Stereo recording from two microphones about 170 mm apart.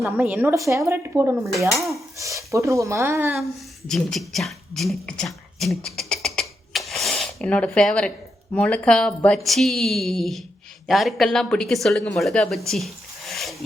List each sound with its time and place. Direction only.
0.0 s speech: 5° right (ahead or behind)
3.8 s speech: centre (ahead or behind)